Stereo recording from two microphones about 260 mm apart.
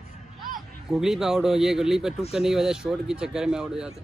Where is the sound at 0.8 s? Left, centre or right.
Centre.